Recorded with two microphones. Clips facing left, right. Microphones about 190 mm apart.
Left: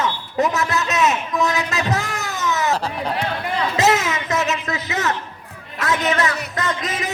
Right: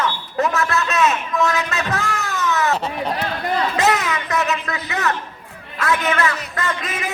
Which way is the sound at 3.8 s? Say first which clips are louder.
Left 1 dB; 25° left (ahead or behind).